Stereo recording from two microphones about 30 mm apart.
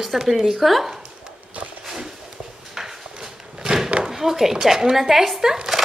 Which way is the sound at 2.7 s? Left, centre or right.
Centre.